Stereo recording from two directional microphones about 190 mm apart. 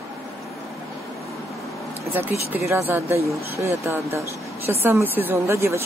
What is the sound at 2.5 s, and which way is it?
Speech, 15° right (ahead or behind).